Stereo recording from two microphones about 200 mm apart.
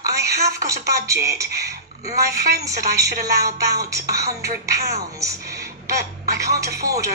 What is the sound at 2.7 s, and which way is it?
Speech, 15° right (ahead or behind).